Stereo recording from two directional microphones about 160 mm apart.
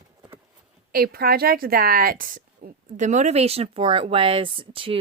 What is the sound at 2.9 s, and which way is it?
Speech, 50° right (ahead or behind).